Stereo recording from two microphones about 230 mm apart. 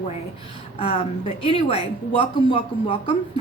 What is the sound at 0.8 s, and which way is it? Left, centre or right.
Speech, left.